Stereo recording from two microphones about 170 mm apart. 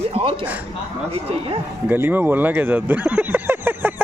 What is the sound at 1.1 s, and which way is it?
Speech, 35° right (ahead or behind).